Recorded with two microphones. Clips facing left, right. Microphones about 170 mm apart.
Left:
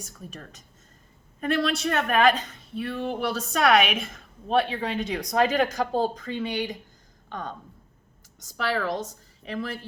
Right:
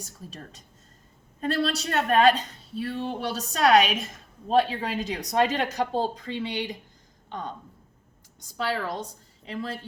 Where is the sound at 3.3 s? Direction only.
35° right (ahead or behind).